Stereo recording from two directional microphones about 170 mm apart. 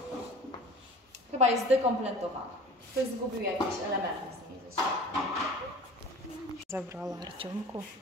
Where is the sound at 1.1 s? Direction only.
40° right (ahead or behind).